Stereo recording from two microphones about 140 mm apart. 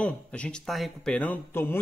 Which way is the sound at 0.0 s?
10° left (ahead or behind).